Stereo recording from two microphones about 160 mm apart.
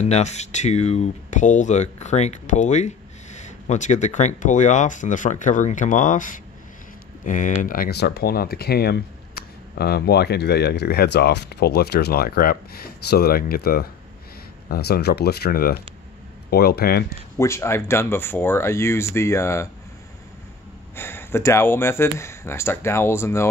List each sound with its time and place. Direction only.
0.0 s speech: 45° left (ahead or behind); by 13.8 s 70° left (ahead or behind)
14.7 s speech: 85° left
17.4 s speech: 15° left (ahead or behind)
20.9 s speech: 15° left (ahead or behind)